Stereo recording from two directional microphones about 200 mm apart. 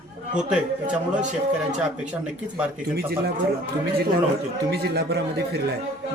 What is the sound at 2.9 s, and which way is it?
Speech, 50° right (ahead or behind).